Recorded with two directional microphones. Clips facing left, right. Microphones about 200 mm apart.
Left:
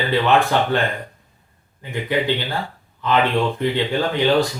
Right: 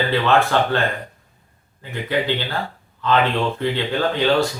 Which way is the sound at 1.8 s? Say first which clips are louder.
Left 1 dB; 15° left (ahead or behind).